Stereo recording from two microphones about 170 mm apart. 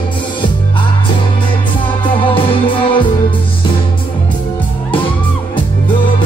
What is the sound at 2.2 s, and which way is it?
Music, 30° left (ahead or behind).